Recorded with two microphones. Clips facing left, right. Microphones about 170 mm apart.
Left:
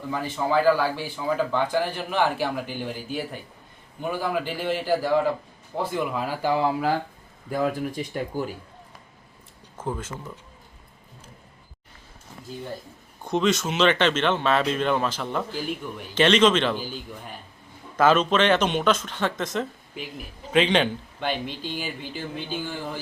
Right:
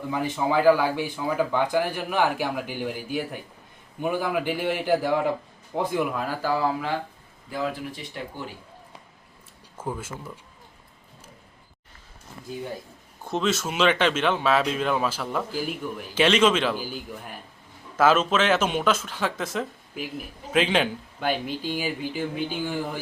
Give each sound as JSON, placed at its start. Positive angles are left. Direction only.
{"t": 0.1, "sound": "speech", "side_deg": -15}
{"t": 6.4, "sound": "speech", "side_deg": 25}
{"t": 7.5, "sound": "speech", "side_deg": 45}
{"t": 9.8, "sound": "speech", "side_deg": -10}
{"t": 13.2, "sound": "speech", "side_deg": -5}